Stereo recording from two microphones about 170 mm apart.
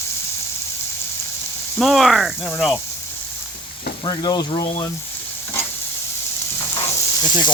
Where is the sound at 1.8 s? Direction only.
Centre (ahead or behind).